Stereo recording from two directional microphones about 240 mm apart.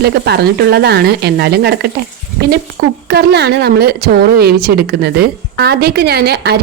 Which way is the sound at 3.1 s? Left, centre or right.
Right.